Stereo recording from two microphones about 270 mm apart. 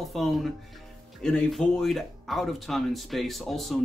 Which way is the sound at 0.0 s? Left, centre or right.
Centre.